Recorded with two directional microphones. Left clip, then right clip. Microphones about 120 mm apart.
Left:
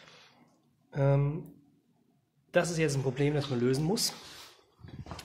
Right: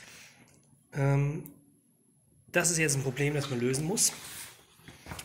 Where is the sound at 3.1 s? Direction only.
35° left (ahead or behind).